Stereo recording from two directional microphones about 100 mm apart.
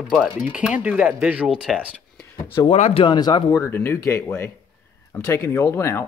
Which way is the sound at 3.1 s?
45° left (ahead or behind).